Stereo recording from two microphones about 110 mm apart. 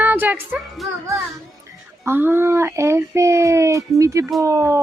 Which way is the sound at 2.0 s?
20° right (ahead or behind).